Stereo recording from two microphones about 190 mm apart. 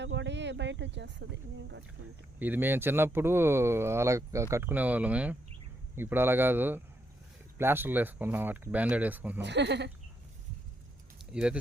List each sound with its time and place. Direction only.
0.0 s speech: 70° right (ahead or behind)
2.4 s speech: 10° right (ahead or behind)
9.4 s speech: 65° right (ahead or behind)
11.3 s speech: 5° right (ahead or behind)